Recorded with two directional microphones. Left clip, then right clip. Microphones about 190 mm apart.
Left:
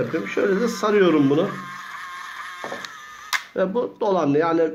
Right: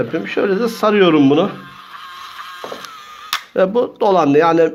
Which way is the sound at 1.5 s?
Centre (ahead or behind).